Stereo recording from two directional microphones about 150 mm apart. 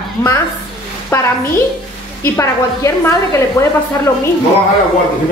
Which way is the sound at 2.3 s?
20° left (ahead or behind).